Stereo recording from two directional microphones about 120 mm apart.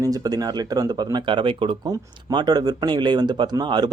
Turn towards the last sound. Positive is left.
turn(degrees=-40)  # may be behind; listen again after turning